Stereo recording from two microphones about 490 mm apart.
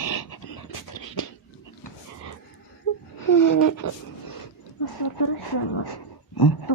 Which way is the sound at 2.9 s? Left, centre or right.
Left.